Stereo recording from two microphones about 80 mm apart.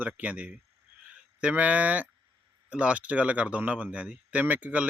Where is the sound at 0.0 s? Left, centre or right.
Centre.